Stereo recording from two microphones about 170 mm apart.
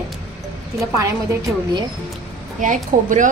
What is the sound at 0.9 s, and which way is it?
Speech, 20° right (ahead or behind).